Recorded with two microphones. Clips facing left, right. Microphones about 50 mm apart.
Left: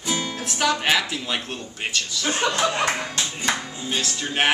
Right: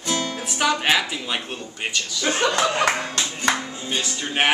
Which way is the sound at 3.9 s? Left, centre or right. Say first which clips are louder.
Right 1 dB; centre.